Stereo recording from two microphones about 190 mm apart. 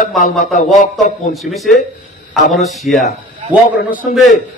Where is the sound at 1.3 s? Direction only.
Centre (ahead or behind).